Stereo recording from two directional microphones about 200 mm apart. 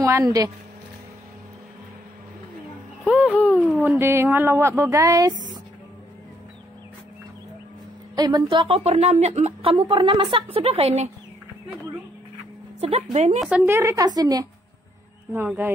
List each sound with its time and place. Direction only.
0.0 s speech: 15° right (ahead or behind)
3.1 s speech: 5° right (ahead or behind)
8.2 s a woman's voice: 20° right (ahead or behind)
12.8 s a woman's voice: 35° right (ahead or behind)
13.4 s a woman's voice: centre (ahead or behind)
13.7 s speech: 15° right (ahead or behind)